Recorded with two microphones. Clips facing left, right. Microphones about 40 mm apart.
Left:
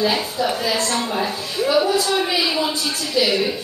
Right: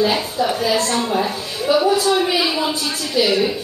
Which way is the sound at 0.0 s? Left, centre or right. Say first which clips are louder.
Right 2 dB; centre.